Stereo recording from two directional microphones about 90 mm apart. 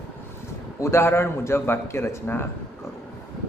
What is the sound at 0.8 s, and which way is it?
Speech, 30° left (ahead or behind).